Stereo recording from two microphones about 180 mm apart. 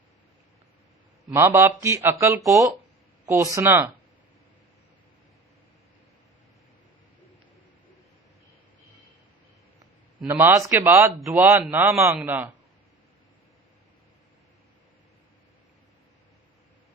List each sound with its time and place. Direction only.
1.3 s speech: 15° right (ahead or behind)
10.2 s speech: 10° right (ahead or behind)
11.2 s a man's voice: centre (ahead or behind)